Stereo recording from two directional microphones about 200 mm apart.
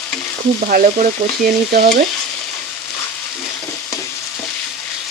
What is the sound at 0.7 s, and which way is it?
Speech, 50° right (ahead or behind).